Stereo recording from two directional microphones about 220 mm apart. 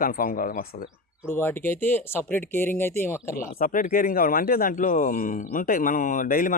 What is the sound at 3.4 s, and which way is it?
Speech, 40° left (ahead or behind).